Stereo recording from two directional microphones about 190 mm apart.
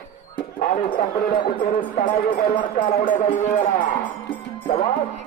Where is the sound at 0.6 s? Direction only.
45° left (ahead or behind).